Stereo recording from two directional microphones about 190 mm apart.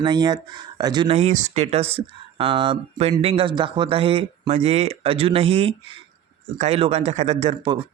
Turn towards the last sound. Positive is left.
turn(degrees=-30)  # may be behind; listen again after turning